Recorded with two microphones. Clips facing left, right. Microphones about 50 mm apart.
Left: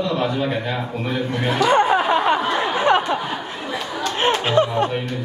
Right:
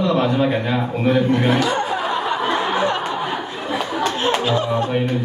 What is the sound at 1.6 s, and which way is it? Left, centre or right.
Music, left.